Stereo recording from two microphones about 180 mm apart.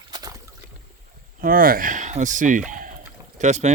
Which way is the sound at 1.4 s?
55° right (ahead or behind).